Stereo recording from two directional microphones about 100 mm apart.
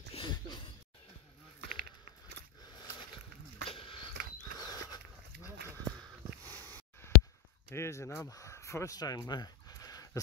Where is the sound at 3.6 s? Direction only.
60° left (ahead or behind).